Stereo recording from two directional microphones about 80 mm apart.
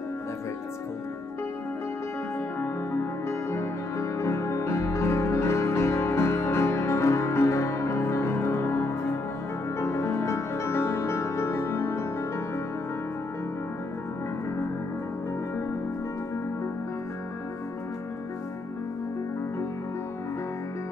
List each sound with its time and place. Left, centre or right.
2.6 s music: left